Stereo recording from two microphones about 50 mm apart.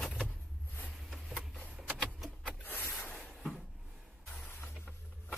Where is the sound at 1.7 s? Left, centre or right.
Centre.